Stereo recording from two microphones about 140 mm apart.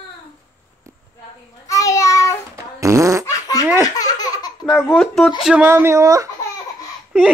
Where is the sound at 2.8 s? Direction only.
20° right (ahead or behind).